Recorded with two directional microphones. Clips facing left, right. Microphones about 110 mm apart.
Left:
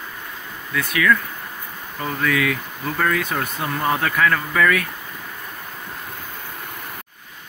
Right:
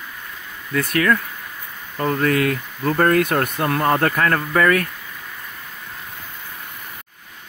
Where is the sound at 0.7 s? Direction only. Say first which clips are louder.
Right 1 dB; 45° right (ahead or behind).